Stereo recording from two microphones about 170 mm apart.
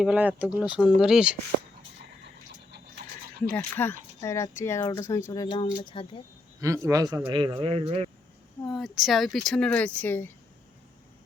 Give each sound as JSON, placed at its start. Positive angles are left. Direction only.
{"t": 0.0, "sound": "speech", "side_deg": -10}
{"t": 3.5, "sound": "speech", "side_deg": 10}
{"t": 6.6, "sound": "a man's voice", "side_deg": -15}
{"t": 8.6, "sound": "speech", "side_deg": 0}